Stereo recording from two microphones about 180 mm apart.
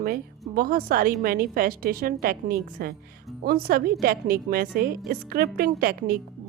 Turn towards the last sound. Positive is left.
turn(degrees=-50)  # may be behind; listen again after turning